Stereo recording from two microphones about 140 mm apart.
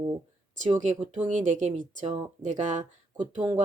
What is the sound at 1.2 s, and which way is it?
A woman's voice, 60° right (ahead or behind).